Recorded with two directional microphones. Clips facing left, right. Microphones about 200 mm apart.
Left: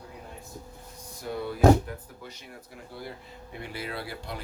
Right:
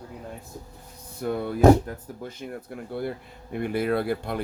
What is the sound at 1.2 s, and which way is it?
Speech, 55° right (ahead or behind).